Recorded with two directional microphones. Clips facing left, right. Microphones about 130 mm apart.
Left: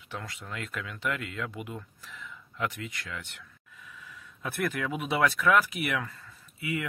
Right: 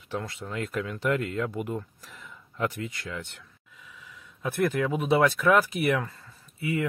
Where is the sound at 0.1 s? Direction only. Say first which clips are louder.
Right 6 dB; 30° right (ahead or behind).